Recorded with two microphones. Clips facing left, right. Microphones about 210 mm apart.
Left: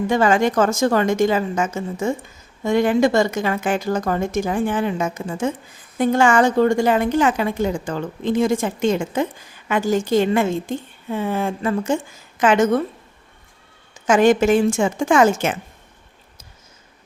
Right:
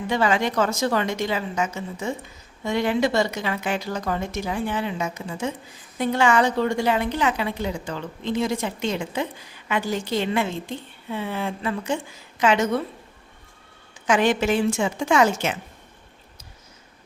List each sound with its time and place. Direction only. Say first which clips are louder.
0.1 s a woman's voice: left 4 dB; 45° left (ahead or behind)
14.1 s a woman's voice: left 6 dB; 45° left (ahead or behind)